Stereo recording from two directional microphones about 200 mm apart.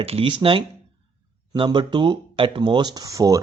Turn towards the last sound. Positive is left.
turn(degrees=-15)  # may be behind; listen again after turning